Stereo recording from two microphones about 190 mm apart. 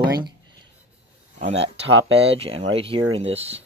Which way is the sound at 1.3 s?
35° right (ahead or behind).